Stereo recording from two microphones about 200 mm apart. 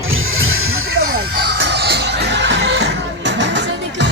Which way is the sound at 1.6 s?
55° right (ahead or behind).